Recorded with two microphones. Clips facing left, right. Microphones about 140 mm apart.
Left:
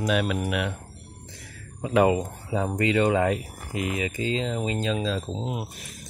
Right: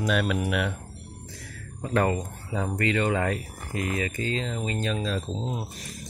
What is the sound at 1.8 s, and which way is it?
Speech, 10° left (ahead or behind).